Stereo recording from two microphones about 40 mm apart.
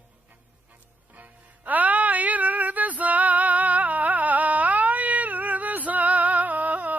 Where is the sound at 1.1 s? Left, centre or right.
Right.